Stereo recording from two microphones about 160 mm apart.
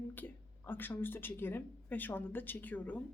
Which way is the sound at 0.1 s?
10° left (ahead or behind).